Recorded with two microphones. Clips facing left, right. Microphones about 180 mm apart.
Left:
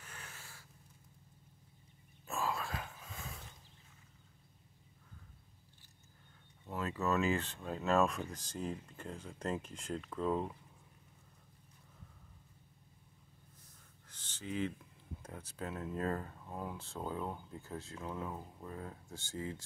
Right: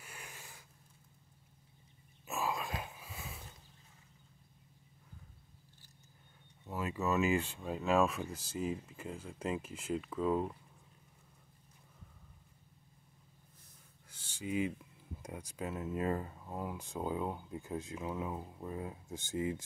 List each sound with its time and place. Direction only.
0.0 s a sound: 10° right (ahead or behind)
2.2 s dog: 10° right (ahead or behind)
6.8 s speech: 15° right (ahead or behind)
14.0 s a sound: 10° right (ahead or behind)
15.2 s speech: 10° right (ahead or behind)
16.7 s speech: 15° right (ahead or behind)